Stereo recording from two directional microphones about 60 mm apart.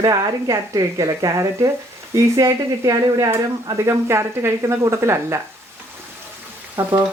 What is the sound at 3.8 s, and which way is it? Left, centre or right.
Speech, right.